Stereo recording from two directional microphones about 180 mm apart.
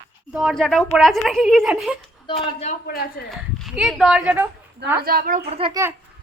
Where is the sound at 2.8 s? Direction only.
55° left (ahead or behind).